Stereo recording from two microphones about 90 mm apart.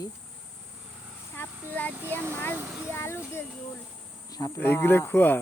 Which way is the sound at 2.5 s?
15° right (ahead or behind).